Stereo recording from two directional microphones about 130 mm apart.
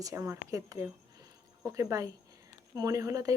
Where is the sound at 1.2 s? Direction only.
25° right (ahead or behind).